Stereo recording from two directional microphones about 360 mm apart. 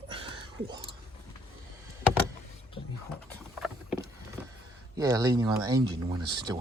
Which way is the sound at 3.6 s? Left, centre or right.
Centre.